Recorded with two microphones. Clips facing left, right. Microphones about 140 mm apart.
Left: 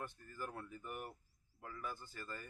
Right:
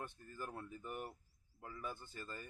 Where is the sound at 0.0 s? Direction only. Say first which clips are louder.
Left 1 dB; 20° right (ahead or behind).